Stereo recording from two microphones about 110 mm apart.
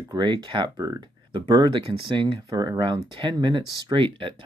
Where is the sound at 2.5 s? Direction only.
35° right (ahead or behind).